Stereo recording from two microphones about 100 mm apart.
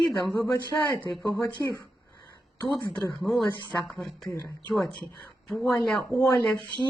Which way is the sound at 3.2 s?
Centre (ahead or behind).